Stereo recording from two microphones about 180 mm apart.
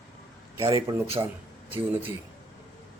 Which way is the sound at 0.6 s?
25° right (ahead or behind).